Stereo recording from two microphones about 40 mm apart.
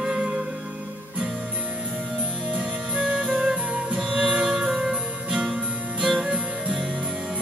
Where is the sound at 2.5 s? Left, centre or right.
Right.